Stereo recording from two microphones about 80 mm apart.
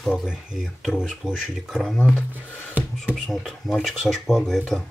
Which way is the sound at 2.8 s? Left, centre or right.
Right.